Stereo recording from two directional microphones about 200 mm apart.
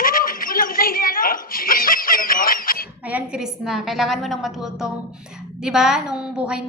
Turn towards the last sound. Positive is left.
turn(degrees=-5)  # may be behind; listen again after turning